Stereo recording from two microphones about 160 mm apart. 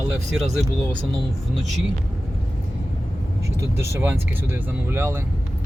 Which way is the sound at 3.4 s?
15° right (ahead or behind).